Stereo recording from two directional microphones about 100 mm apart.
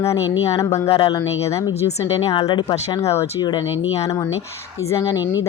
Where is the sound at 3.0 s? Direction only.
30° left (ahead or behind).